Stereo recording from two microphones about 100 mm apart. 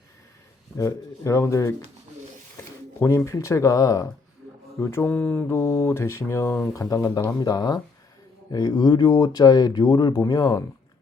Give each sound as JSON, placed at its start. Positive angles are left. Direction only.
{"t": 0.8, "sound": "speech", "side_deg": 30}
{"t": 3.0, "sound": "speech", "side_deg": 25}
{"t": 4.8, "sound": "a sound", "side_deg": 25}
{"t": 5.1, "sound": "mantra", "side_deg": 15}
{"t": 5.5, "sound": "a sound", "side_deg": 30}
{"t": 6.7, "sound": "speech", "side_deg": 35}